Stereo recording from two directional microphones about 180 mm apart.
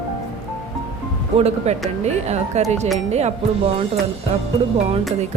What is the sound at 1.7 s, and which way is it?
A woman's voice, 35° right (ahead or behind).